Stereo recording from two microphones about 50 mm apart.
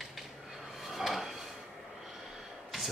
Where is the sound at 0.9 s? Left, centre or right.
Centre.